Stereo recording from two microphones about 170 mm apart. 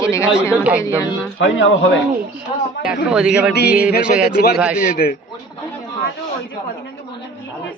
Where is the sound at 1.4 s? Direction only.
90° left.